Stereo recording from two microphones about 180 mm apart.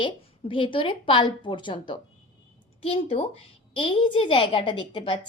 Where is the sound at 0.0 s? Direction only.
30° left (ahead or behind).